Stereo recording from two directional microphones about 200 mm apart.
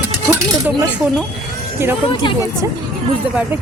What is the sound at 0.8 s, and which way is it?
Speech, 5° right (ahead or behind).